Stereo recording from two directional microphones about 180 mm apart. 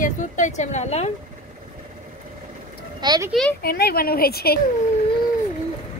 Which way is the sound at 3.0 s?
25° right (ahead or behind).